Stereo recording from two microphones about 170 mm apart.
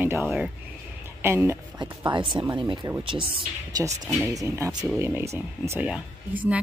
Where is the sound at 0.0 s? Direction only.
10° right (ahead or behind).